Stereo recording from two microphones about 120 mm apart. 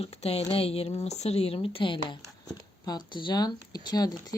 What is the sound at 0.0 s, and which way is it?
Speech, 60° left (ahead or behind).